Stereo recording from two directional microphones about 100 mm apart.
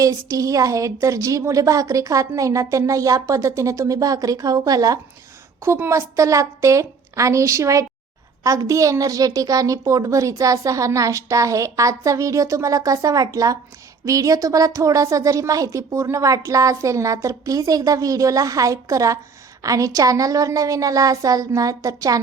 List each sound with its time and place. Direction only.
0.0 s a woman's voice: 35° right (ahead or behind)
5.6 s a woman's voice: 25° right (ahead or behind)